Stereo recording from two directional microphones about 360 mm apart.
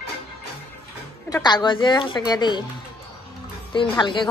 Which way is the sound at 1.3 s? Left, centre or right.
Centre.